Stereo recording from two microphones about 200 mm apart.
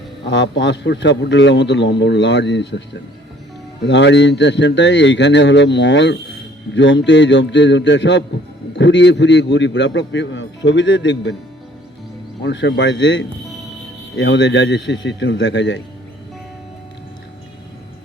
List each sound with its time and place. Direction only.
0.3 s a man's voice: 60° left (ahead or behind)
3.8 s a man's voice: 60° left (ahead or behind)
12.4 s a man's voice: 60° left (ahead or behind)